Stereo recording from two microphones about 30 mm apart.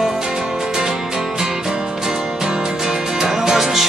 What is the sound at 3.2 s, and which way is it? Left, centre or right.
Music, centre.